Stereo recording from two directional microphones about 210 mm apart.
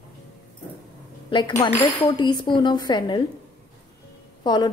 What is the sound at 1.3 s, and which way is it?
A woman's voice, 15° left (ahead or behind).